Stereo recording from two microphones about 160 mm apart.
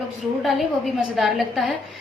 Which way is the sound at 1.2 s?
Centre (ahead or behind).